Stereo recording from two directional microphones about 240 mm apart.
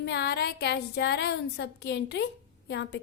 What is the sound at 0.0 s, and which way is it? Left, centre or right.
A woman's voice, left.